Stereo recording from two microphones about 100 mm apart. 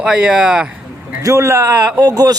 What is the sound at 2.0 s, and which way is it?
Speech, 40° right (ahead or behind).